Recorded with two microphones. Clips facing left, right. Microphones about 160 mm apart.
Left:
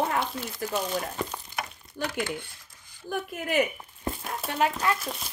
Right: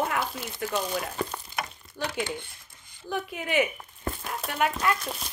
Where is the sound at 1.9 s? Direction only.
50° left (ahead or behind).